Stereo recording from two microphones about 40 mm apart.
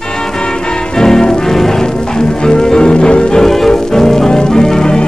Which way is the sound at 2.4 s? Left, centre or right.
Centre.